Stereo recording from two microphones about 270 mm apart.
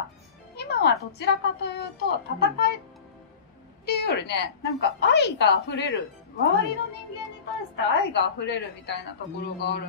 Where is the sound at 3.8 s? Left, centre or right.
Left.